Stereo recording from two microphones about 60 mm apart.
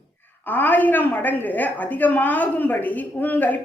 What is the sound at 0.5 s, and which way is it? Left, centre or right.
A woman's voice, left.